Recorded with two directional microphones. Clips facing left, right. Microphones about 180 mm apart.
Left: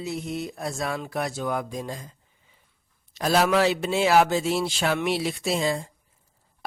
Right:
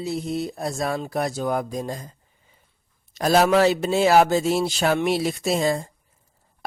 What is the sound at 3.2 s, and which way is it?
A man's voice, 40° right (ahead or behind).